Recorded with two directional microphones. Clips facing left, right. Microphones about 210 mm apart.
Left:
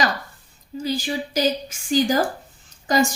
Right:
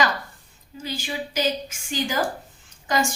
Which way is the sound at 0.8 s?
35° left (ahead or behind).